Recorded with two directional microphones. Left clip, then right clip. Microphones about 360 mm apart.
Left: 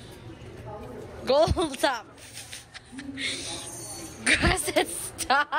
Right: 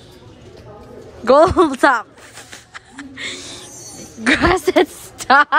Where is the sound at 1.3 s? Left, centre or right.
Right.